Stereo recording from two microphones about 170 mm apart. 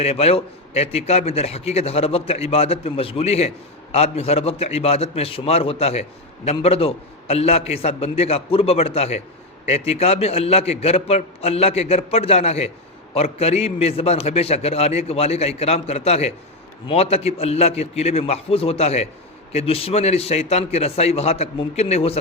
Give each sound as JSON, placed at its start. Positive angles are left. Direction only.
{"t": 0.0, "sound": "a man's voice", "side_deg": 35}